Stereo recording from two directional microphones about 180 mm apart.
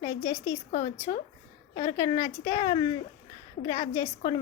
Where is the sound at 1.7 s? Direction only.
20° left (ahead or behind).